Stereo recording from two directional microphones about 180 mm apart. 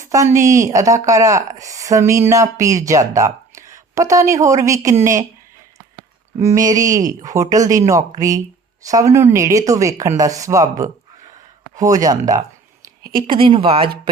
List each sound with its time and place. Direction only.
0.0 s speech: 15° right (ahead or behind)
6.4 s speech: 20° right (ahead or behind)
13.0 s a sound: 55° right (ahead or behind)
13.2 s speech: 30° right (ahead or behind)